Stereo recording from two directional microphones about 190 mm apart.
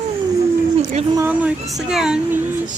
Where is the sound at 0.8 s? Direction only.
35° right (ahead or behind).